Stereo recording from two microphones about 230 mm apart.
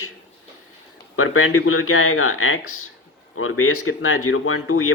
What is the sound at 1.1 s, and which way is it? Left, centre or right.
Speech, left.